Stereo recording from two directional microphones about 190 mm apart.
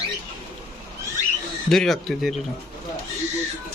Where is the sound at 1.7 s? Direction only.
Centre (ahead or behind).